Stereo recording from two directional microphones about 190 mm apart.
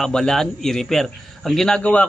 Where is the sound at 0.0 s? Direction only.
Centre (ahead or behind).